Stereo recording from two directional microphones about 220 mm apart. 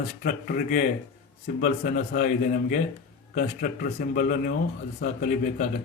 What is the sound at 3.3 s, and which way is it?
Speech, 40° left (ahead or behind).